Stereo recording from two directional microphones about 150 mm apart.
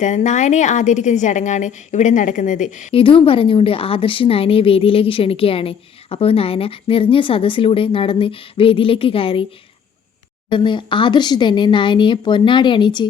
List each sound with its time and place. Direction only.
0.0 s a woman's voice: 55° left (ahead or behind)
2.9 s a woman's voice: 35° left (ahead or behind)
10.5 s a woman's voice: 35° left (ahead or behind)